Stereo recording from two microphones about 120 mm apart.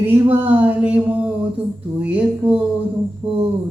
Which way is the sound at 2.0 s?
10° right (ahead or behind).